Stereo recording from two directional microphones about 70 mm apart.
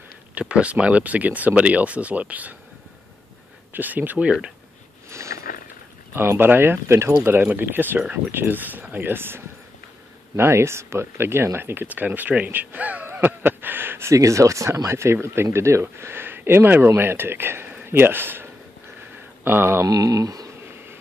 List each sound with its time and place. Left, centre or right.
0.3 s speech: centre
3.7 s speech: right
5.1 s a sound: right
6.1 s speech: right
14.1 s speech: right
19.9 s a sound: right